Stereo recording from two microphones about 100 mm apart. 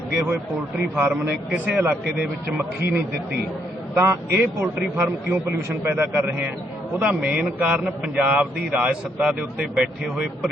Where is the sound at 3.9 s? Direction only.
25° right (ahead or behind).